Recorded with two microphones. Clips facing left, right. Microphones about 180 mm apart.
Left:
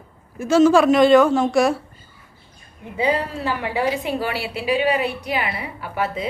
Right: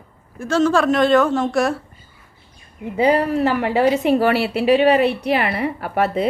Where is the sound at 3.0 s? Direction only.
60° right (ahead or behind).